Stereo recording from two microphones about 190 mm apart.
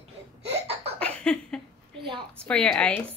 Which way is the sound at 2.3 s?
5° left (ahead or behind).